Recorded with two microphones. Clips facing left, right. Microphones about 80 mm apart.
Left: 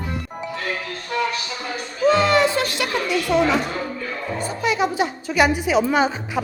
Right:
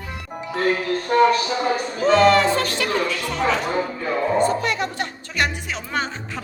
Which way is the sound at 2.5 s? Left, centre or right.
Centre.